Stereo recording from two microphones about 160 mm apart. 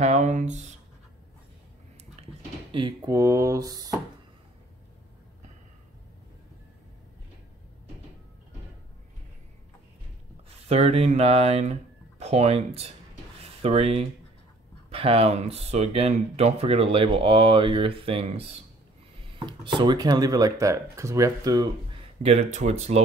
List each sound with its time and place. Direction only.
0.0 s speech: 45° right (ahead or behind)
2.7 s speech: 35° right (ahead or behind)
3.1 s speech: 20° right (ahead or behind)
10.7 s speech: 40° right (ahead or behind)
13.4 s a sound: 40° right (ahead or behind)
14.9 s speech: 40° right (ahead or behind)
22.2 s speech: 40° right (ahead or behind)